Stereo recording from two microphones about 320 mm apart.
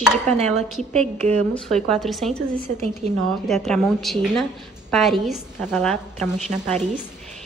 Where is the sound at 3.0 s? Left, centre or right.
Right.